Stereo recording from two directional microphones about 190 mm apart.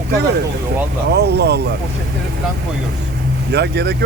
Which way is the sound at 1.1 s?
60° right (ahead or behind).